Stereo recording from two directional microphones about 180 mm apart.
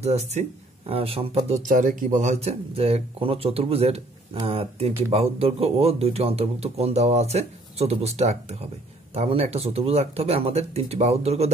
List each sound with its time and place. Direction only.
0.0 s speech: 35° right (ahead or behind)
1.7 s speech: 45° right (ahead or behind)